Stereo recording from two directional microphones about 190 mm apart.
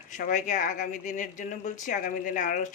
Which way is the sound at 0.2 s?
45° left (ahead or behind).